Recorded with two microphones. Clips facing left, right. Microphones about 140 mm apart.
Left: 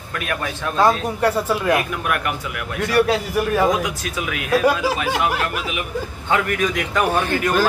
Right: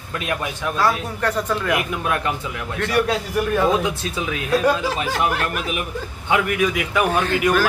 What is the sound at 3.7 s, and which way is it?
Speech, 30° right (ahead or behind).